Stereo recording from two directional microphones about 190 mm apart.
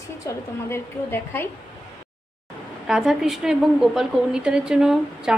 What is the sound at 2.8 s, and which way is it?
A woman's voice, centre (ahead or behind).